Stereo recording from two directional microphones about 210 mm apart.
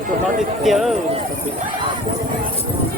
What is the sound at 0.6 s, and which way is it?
Speech, centre (ahead or behind).